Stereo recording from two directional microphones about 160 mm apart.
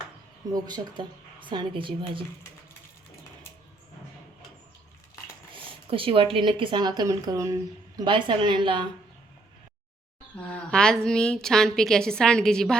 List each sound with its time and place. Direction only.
0.5 s a woman's voice: 25° right (ahead or behind)
5.5 s a woman's voice: 35° right (ahead or behind)
10.3 s a woman's voice: 5° left (ahead or behind)